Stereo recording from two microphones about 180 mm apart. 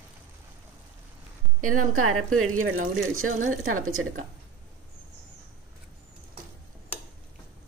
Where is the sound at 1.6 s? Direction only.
50° right (ahead or behind).